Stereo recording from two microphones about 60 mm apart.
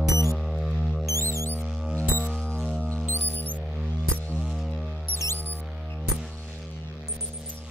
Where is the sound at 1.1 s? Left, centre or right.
Left.